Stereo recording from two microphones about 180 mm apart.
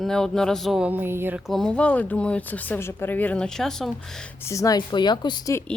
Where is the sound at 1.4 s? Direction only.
Centre (ahead or behind).